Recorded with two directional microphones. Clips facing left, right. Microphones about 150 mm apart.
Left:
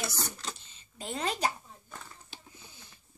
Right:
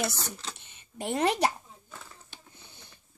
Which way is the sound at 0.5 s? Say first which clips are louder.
Right 7 dB; 60° right (ahead or behind).